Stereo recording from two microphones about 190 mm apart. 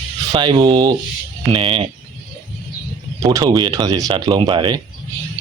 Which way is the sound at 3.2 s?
20° right (ahead or behind).